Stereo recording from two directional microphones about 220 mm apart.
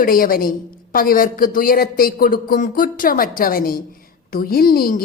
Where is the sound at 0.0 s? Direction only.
40° left (ahead or behind).